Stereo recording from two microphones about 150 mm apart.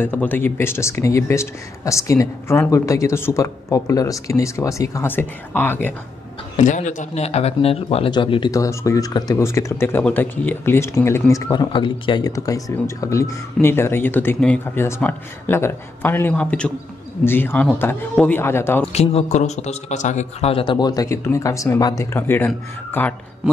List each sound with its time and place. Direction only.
0.0 s speech: 10° left (ahead or behind)
6.5 s a man's voice: 55° left (ahead or behind); by 11.7 s 20° left (ahead or behind)
11.7 s speech: 30° left (ahead or behind); by 18.9 s 15° left (ahead or behind)
18.9 s a man's voice: 45° left (ahead or behind); by 23.1 s 15° left (ahead or behind)